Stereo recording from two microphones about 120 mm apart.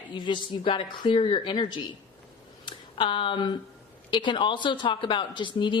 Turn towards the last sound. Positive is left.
turn(degrees=40)  # may be behind; listen again after turning